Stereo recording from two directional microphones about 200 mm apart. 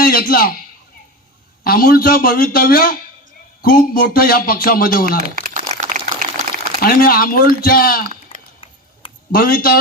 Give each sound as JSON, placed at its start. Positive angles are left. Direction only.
{"t": 0.0, "sound": "a man's voice", "side_deg": 45}
{"t": 1.6, "sound": "speech", "side_deg": 45}
{"t": 5.3, "sound": "crumpling", "side_deg": -45}
{"t": 6.8, "sound": "speech", "side_deg": 45}
{"t": 9.3, "sound": "speech", "side_deg": 45}